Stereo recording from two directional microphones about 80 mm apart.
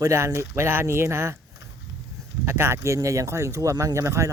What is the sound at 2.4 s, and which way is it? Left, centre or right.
Speech, right.